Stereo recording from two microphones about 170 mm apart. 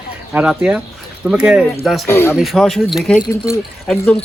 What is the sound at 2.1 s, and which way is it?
Speech, 15° left (ahead or behind).